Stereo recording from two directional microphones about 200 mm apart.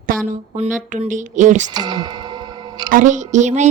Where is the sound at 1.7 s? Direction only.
20° right (ahead or behind).